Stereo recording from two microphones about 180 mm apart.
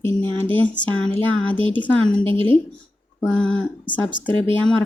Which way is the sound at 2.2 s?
30° right (ahead or behind).